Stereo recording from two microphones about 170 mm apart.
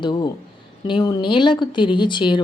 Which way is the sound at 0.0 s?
25° left (ahead or behind).